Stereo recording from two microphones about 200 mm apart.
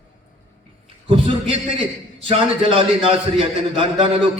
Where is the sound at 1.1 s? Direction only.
25° right (ahead or behind).